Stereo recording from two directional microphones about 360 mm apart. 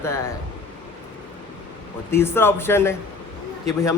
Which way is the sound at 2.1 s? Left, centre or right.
Centre.